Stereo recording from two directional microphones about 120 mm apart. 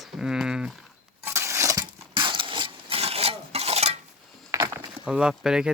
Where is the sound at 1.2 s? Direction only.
20° right (ahead or behind).